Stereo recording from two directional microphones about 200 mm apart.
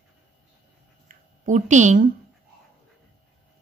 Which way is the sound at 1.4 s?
40° right (ahead or behind).